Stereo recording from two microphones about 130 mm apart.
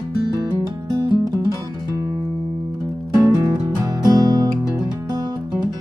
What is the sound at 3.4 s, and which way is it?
Music, 30° right (ahead or behind).